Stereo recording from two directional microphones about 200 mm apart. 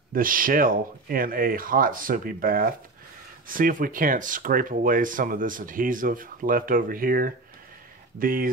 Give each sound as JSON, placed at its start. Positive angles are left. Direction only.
{"t": 0.1, "sound": "speech", "side_deg": -45}